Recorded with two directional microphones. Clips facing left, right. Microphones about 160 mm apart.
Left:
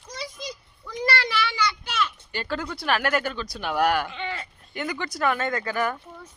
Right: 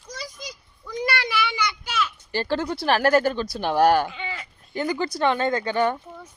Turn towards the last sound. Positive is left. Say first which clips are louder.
# right 4 dB
turn(degrees=-25)  # may be behind; listen again after turning